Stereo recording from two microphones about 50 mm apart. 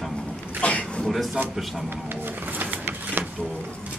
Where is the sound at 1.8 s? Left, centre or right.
Right.